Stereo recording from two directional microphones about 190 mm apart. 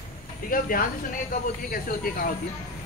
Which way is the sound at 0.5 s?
50° left (ahead or behind).